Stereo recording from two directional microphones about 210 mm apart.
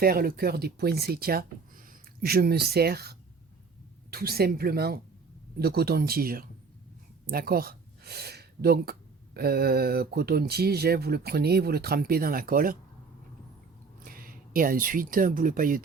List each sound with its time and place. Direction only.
0.0 s speech: 45° right (ahead or behind)
14.0 s speech: 45° right (ahead or behind)